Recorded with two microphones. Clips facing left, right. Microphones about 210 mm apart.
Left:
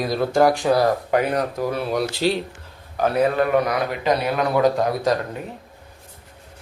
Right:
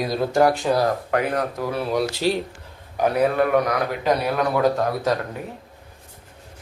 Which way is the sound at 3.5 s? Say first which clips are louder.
Even; 10° left (ahead or behind).